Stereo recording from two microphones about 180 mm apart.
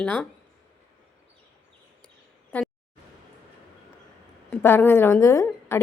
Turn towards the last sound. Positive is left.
turn(degrees=15)  # may be behind; listen again after turning